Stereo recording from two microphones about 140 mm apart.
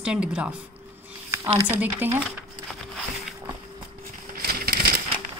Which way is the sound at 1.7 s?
15° right (ahead or behind).